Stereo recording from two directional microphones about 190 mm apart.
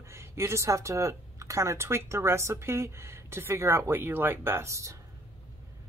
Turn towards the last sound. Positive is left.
turn(degrees=-15)  # may be behind; listen again after turning